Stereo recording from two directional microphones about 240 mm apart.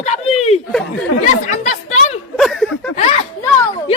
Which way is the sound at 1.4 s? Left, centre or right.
Left.